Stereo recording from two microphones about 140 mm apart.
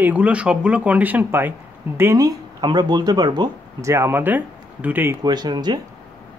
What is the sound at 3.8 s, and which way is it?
Speech, 20° right (ahead or behind).